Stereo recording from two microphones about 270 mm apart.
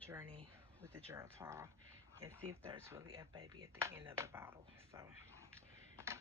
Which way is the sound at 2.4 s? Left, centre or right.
Right.